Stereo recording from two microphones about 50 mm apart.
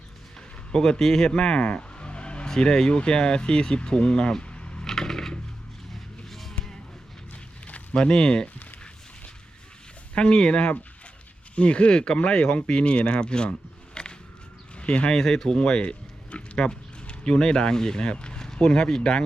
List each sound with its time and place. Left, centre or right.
0.7 s speech: centre
4.9 s coin: centre
6.2 s music: centre
7.9 s speech: centre
10.2 s speech: centre
15.1 s speech: centre